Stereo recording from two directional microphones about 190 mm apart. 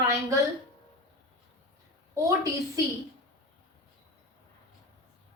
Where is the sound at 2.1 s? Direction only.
15° right (ahead or behind).